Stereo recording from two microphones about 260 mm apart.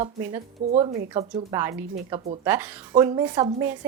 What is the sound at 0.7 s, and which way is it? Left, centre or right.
Speech, right.